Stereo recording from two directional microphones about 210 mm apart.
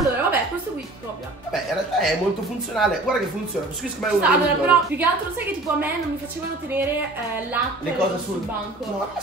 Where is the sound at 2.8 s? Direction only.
Centre (ahead or behind).